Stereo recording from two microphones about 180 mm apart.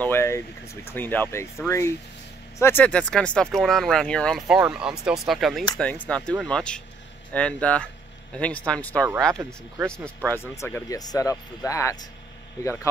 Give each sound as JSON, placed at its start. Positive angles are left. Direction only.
{"t": 0.0, "sound": "speech", "side_deg": 15}
{"t": 9.3, "sound": "speech", "side_deg": -15}
{"t": 9.9, "sound": "speech", "side_deg": 5}